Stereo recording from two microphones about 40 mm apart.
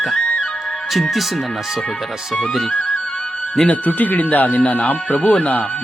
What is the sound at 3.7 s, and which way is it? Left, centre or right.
Speech, left.